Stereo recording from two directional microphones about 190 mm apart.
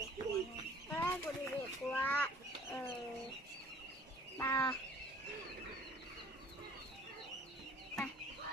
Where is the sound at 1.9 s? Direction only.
10° left (ahead or behind).